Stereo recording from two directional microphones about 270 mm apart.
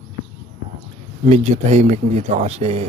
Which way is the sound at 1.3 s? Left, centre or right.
Right.